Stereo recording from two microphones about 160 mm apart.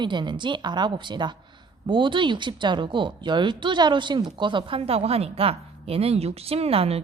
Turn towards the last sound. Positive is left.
turn(degrees=-40)  # may be behind; listen again after turning